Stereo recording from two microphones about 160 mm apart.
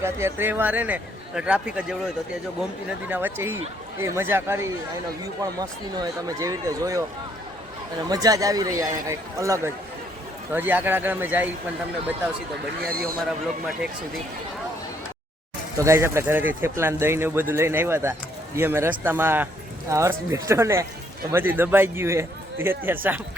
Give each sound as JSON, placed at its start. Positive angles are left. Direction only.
{"t": 0.0, "sound": "a man's voice", "side_deg": -15}
{"t": 3.1, "sound": "a man's voice", "side_deg": -10}
{"t": 8.1, "sound": "a man's voice", "side_deg": -25}
{"t": 12.9, "sound": "speech", "side_deg": -65}
{"t": 15.8, "sound": "a man's voice", "side_deg": -15}